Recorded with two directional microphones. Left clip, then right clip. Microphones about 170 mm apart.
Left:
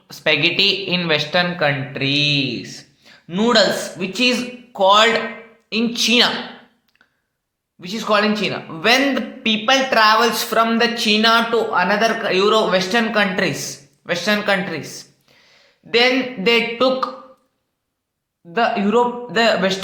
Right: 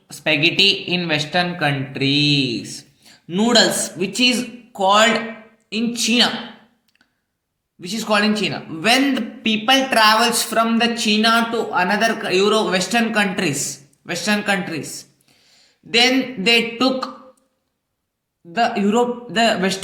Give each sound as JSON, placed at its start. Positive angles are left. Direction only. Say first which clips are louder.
{"t": 0.1, "sound": "speech", "louder": "left 1 dB", "side_deg": -10}
{"t": 7.8, "sound": "a man's voice", "louder": "left 1 dB", "side_deg": -20}
{"t": 18.5, "sound": "speech", "louder": "left 1 dB", "side_deg": -15}